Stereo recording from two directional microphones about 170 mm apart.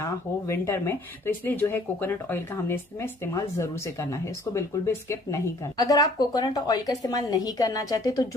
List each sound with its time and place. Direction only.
0.0 s a woman's voice: 15° left (ahead or behind)